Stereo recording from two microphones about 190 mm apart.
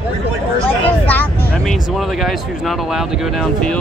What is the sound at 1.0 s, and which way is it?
Speech, 10° left (ahead or behind).